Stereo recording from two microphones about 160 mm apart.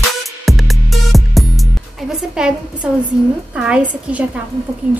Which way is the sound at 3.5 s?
5° right (ahead or behind).